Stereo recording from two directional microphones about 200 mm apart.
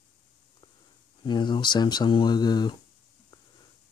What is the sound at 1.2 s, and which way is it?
Speech, 25° left (ahead or behind).